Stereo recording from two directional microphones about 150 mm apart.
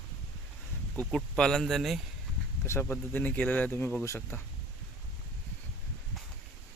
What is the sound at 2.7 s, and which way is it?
Speech, 15° left (ahead or behind).